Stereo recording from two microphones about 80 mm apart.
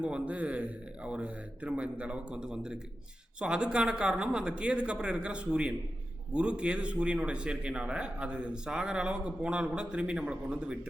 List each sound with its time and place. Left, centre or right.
0.0 s a man's voice: centre